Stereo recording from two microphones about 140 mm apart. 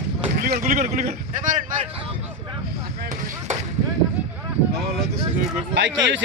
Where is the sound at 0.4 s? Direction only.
65° right (ahead or behind).